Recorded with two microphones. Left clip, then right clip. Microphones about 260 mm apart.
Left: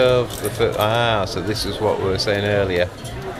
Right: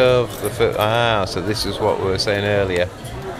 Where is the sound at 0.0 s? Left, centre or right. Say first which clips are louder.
Right 1 dB; centre.